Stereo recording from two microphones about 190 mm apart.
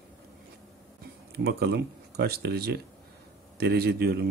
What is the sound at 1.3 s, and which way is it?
Speech, 60° right (ahead or behind).